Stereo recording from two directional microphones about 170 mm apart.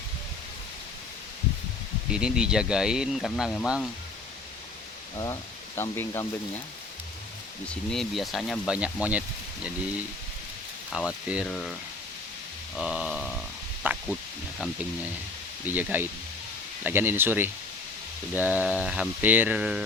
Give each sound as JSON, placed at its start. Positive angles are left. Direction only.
{"t": 2.0, "sound": "speech", "side_deg": -5}
{"t": 5.1, "sound": "speech", "side_deg": 20}
{"t": 7.7, "sound": "speech", "side_deg": 5}
{"t": 10.9, "sound": "speech", "side_deg": -5}
{"t": 12.7, "sound": "speech", "side_deg": -5}
{"t": 13.8, "sound": "a sound", "side_deg": -10}
{"t": 15.6, "sound": "a sound", "side_deg": -10}